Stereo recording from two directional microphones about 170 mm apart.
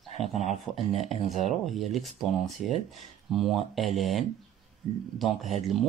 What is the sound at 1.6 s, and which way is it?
Speech, centre (ahead or behind).